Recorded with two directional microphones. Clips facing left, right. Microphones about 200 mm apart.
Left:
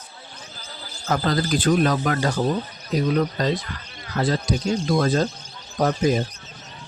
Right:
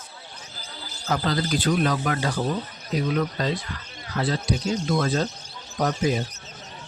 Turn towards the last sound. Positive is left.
turn(degrees=50)  # may be behind; listen again after turning